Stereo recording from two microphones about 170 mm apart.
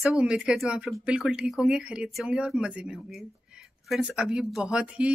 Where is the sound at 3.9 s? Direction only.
5° right (ahead or behind).